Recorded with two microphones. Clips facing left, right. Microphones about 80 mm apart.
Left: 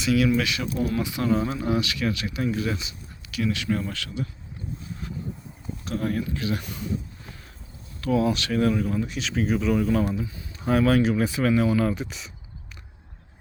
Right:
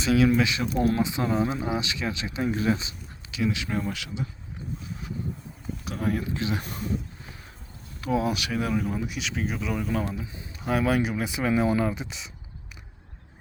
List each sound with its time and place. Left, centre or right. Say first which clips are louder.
0.0 s speech: right 1 dB; right
0.3 s speech: right 1 dB; right
0.8 s speech: right 3 dB; right
1.0 s speech: left 1 dB; right
3.3 s speech: left 2 dB; centre
5.0 s a sound: left 2 dB; centre
5.8 s speech: left 1 dB; centre
6.3 s speech: left 1 dB; right
8.0 s speech: left 3 dB; centre